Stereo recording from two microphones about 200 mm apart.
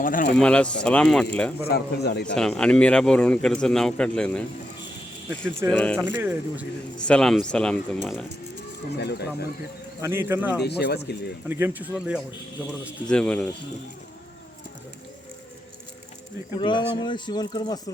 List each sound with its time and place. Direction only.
0.0 s speech: 45° left (ahead or behind)
0.3 s speech: 5° left (ahead or behind)
1.6 s speech: 50° left (ahead or behind)
2.3 s speech: 5° left (ahead or behind)
5.6 s speech: 5° left (ahead or behind)
9.0 s speech: 55° left (ahead or behind)
10.0 s speech: 10° right (ahead or behind)
10.6 s speech: 55° left (ahead or behind)
11.4 s speech: 10° right (ahead or behind)
13.1 s speech: 5° left (ahead or behind)
16.6 s speech: 25° left (ahead or behind)